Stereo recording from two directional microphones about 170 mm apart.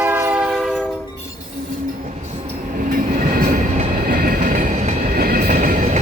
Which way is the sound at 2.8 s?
55° right (ahead or behind).